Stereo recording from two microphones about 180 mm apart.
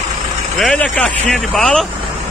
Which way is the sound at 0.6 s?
5° left (ahead or behind).